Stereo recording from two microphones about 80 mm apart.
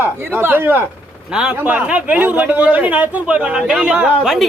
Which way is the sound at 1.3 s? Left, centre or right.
Centre.